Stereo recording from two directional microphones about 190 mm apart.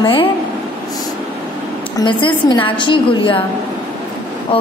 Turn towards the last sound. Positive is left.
turn(degrees=25)  # may be behind; listen again after turning